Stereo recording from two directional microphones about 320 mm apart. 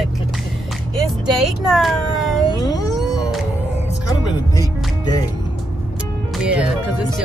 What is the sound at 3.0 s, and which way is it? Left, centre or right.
Music, centre.